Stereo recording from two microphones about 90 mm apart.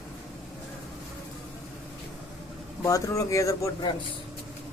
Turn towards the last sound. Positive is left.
turn(degrees=35)  # may be behind; listen again after turning